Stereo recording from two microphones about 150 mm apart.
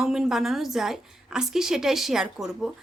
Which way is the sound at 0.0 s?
5° right (ahead or behind).